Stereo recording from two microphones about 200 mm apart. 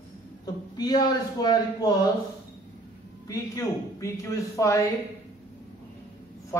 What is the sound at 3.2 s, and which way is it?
Speech, 15° left (ahead or behind).